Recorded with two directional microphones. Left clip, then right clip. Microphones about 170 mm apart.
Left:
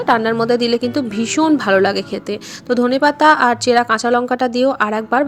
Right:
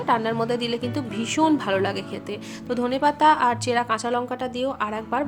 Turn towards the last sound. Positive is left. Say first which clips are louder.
# left 10 dB
turn(degrees=30)  # may be behind; listen again after turning